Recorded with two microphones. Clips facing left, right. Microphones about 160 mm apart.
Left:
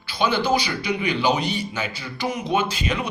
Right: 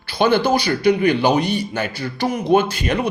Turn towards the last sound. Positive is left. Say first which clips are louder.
# right 6 dB
turn(degrees=-55)  # may be behind; listen again after turning